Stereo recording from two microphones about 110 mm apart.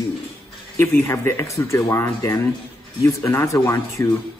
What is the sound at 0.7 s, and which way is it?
A man's voice, 20° left (ahead or behind).